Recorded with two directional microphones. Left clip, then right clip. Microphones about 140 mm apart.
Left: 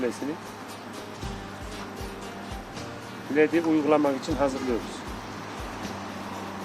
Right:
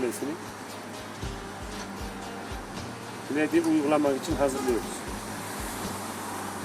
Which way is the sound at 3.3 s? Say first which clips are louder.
Left 3 dB; 50° left (ahead or behind).